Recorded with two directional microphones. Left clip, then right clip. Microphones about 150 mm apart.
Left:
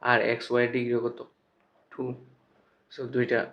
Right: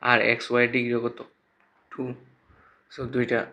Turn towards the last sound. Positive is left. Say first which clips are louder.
# right 1 dB
turn(degrees=-35)  # may be behind; listen again after turning